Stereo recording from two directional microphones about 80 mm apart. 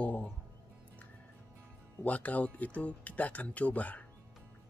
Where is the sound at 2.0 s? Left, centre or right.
Centre.